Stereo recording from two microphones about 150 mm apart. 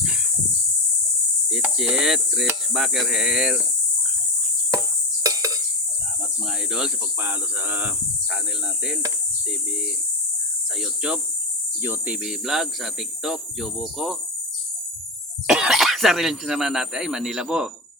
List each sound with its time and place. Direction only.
1.5 s cricket: 5° right (ahead or behind)
2.7 s speech: centre (ahead or behind)
5.2 s a sound: 25° right (ahead or behind)
6.7 s speech: 5° right (ahead or behind)
10.8 s speech: 5° right (ahead or behind)
15.4 s speech: 5° right (ahead or behind)